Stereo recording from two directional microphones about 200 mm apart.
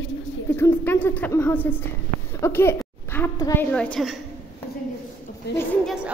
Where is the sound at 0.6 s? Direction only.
10° left (ahead or behind).